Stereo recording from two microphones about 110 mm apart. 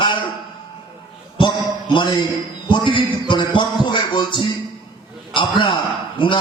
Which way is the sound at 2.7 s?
45° left (ahead or behind).